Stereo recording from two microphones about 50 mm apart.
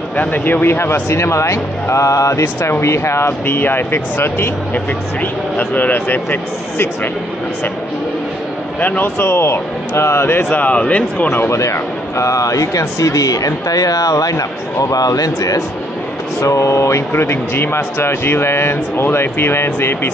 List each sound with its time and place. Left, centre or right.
0.1 s speech: left
2.8 s speech: left
4.7 s speech: left
8.7 s speech: left
9.0 s speech: left
10.5 s speech: left
11.2 s speech: left
11.5 s speech: left
16.3 s speech: left
17.1 s speech: left